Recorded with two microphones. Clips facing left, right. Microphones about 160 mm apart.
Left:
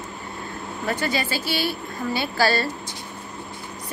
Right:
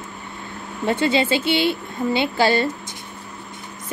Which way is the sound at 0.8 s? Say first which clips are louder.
Right 7 dB; 25° right (ahead or behind).